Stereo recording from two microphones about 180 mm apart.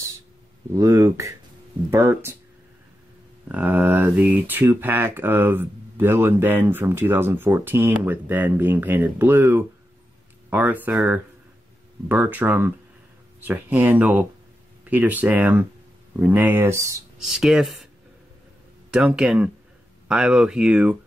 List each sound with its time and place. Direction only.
0.7 s speech: 20° right (ahead or behind)
3.4 s speech: 10° right (ahead or behind)
17.2 s speech: centre (ahead or behind)
18.9 s speech: 5° right (ahead or behind)